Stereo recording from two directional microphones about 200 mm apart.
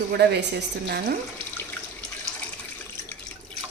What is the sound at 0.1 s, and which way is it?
Speech, 55° right (ahead or behind).